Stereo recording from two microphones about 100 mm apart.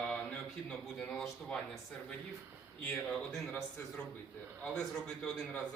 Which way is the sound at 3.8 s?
20° left (ahead or behind).